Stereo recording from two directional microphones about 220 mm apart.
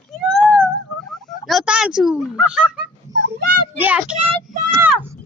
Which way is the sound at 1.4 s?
Centre (ahead or behind).